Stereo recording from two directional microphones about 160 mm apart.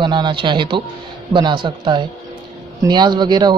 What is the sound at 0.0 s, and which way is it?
Speech, 30° right (ahead or behind).